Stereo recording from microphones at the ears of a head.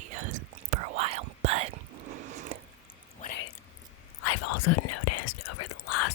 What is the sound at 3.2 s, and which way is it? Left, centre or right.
Whispering, left.